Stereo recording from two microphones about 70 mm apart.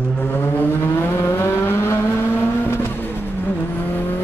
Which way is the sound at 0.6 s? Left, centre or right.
Left.